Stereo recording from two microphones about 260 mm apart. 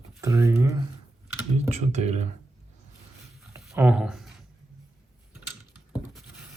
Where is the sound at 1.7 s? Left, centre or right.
Right.